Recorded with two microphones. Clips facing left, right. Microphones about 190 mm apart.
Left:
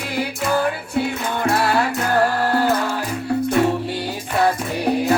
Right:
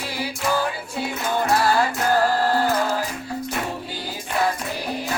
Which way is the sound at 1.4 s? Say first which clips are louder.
Left 2 dB; 60° left (ahead or behind).